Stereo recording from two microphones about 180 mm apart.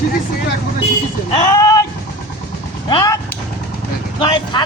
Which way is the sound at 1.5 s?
15° left (ahead or behind).